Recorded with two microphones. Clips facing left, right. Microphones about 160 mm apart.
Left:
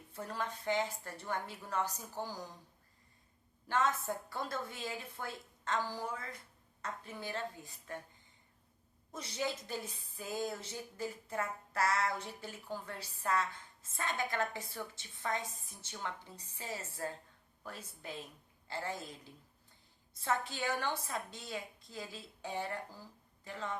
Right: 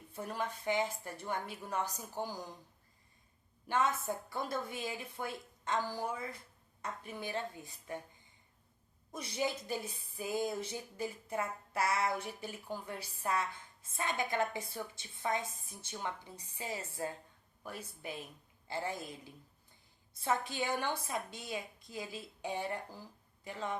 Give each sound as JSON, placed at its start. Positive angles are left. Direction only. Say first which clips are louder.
{"t": 0.1, "sound": "a woman's voice", "louder": "right 2 dB", "side_deg": -15}
{"t": 3.7, "sound": "a woman's voice", "louder": "even", "side_deg": -15}
{"t": 9.1, "sound": "a woman's voice", "louder": "right 2 dB", "side_deg": -15}